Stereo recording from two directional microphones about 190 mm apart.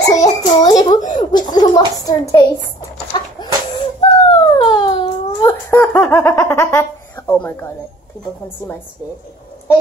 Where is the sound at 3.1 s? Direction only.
25° left (ahead or behind).